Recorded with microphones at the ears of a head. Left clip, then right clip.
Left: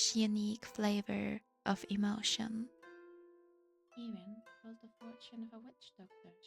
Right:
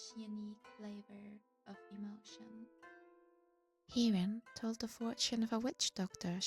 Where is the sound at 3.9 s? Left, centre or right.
Right.